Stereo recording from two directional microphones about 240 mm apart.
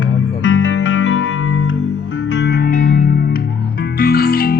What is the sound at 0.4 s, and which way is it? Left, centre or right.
Music, left.